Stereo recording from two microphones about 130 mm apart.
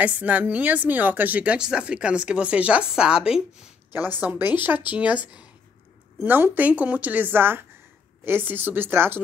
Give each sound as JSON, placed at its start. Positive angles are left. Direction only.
{"t": 0.0, "sound": "a woman's voice", "side_deg": -10}